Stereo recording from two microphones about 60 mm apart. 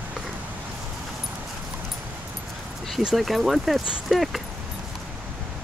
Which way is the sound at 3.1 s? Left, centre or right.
Centre.